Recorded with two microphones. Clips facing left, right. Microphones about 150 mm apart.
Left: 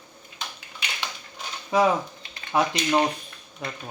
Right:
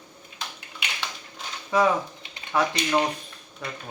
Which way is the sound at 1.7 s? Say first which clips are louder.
Left 1 dB; 15° left (ahead or behind).